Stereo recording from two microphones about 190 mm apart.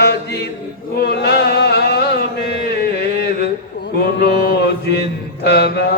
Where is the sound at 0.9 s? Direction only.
60° left (ahead or behind).